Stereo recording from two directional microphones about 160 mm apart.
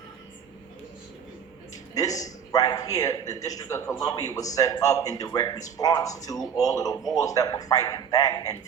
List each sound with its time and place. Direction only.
2.0 s a man's voice: 20° left (ahead or behind)